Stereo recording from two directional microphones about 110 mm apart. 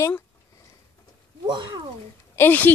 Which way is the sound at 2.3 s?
20° left (ahead or behind).